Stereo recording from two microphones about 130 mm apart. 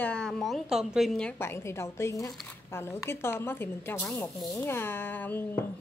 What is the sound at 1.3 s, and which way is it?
A woman's voice, 20° left (ahead or behind).